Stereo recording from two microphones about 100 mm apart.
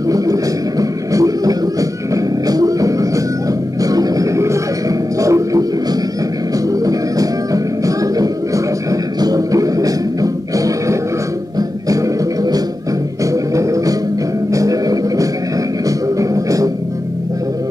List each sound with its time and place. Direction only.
0.1 s music: 35° right (ahead or behind)
6.8 s music: 35° right (ahead or behind)
13.2 s music: 35° right (ahead or behind)